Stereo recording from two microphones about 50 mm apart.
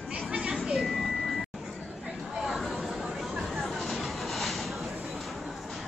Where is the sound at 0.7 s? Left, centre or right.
Centre.